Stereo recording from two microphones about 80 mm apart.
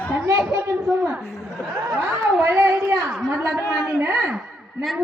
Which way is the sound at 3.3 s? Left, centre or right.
Right.